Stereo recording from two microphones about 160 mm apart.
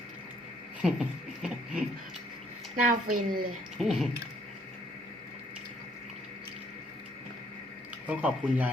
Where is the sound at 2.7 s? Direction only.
55° right (ahead or behind).